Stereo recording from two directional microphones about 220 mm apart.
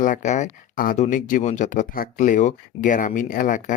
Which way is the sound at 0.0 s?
35° left (ahead or behind).